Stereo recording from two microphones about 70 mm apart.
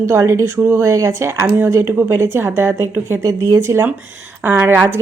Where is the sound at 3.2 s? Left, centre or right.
Right.